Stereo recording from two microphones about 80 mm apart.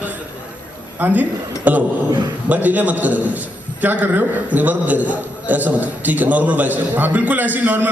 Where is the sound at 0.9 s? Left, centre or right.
Right.